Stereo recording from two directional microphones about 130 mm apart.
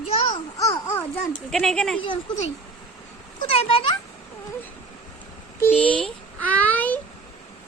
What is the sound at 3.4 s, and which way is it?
Speech, 50° left (ahead or behind).